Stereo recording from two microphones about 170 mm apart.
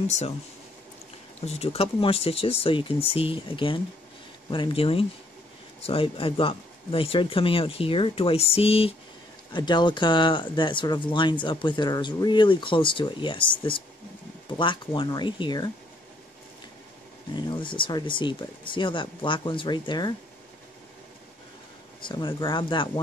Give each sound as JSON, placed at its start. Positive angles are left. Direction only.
{"t": 0.0, "sound": "speech", "side_deg": 40}
{"t": 1.4, "sound": "speech", "side_deg": 35}
{"t": 17.4, "sound": "speech", "side_deg": 25}
{"t": 22.0, "sound": "speech", "side_deg": 25}